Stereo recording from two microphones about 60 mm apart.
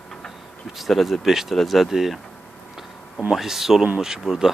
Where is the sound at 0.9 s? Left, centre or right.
Centre.